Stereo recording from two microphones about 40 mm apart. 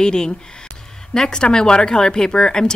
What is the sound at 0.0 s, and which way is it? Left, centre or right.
Speech, centre.